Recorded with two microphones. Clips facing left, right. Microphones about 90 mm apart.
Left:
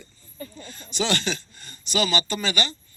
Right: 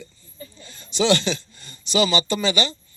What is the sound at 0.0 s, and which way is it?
A man's voice, 50° left (ahead or behind).